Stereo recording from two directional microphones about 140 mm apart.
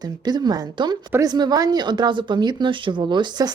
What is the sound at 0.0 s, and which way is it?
Speech, 30° right (ahead or behind).